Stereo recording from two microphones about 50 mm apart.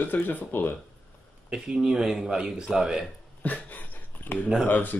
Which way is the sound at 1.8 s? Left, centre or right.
Centre.